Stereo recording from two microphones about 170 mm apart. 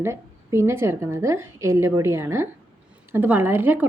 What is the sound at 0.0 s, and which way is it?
A woman's voice, 15° right (ahead or behind).